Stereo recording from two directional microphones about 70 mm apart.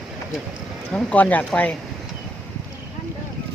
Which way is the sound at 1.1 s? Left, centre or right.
Left.